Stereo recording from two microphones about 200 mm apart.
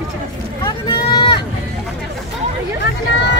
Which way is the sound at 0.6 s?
20° left (ahead or behind).